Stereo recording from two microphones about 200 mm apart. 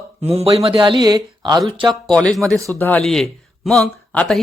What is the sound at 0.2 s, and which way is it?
Speech, 30° right (ahead or behind).